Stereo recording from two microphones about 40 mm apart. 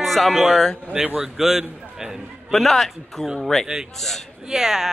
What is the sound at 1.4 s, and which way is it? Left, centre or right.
Speech, centre.